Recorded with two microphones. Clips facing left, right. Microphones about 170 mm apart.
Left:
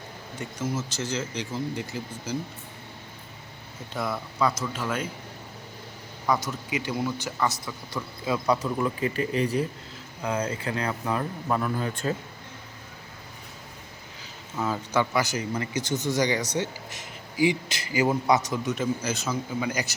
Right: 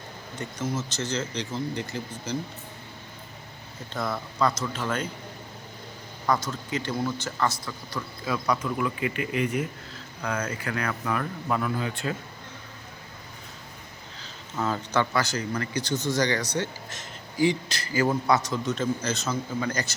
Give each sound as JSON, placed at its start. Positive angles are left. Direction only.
{"t": 0.3, "sound": "a man's voice", "side_deg": 5}
{"t": 3.9, "sound": "a man's voice", "side_deg": 10}
{"t": 6.5, "sound": "a man's voice", "side_deg": 10}
{"t": 8.2, "sound": "speech", "side_deg": 20}
{"t": 8.6, "sound": "speech", "side_deg": 35}
{"t": 11.5, "sound": "speech", "side_deg": 40}
{"t": 14.2, "sound": "a man's voice", "side_deg": 10}